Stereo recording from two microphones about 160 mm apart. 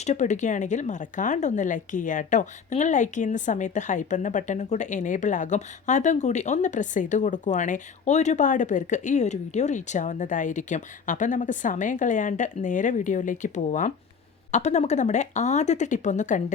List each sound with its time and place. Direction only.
0.0 s speech: 50° left (ahead or behind)